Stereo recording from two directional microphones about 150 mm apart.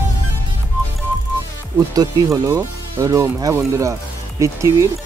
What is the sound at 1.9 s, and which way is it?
Speech, 25° right (ahead or behind).